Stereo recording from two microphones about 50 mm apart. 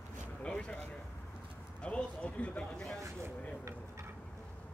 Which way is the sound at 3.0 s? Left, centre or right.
Right.